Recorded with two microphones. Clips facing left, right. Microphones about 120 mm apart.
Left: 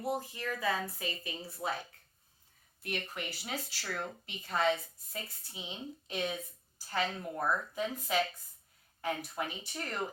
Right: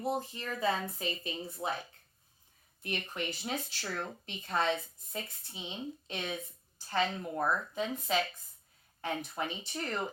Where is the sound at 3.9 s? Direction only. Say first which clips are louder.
Even; 5° left (ahead or behind).